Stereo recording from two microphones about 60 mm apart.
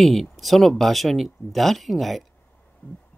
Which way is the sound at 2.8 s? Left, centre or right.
Left.